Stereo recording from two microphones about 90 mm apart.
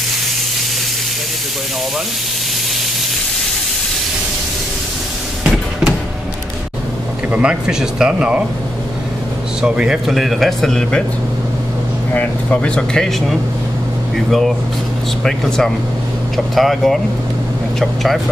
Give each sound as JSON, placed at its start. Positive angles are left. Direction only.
{"t": 5.4, "sound": "a sound", "side_deg": -5}
{"t": 7.2, "sound": "speech", "side_deg": -15}
{"t": 9.6, "sound": "speech", "side_deg": -10}
{"t": 12.1, "sound": "speech", "side_deg": 20}
{"t": 12.5, "sound": "speech", "side_deg": 10}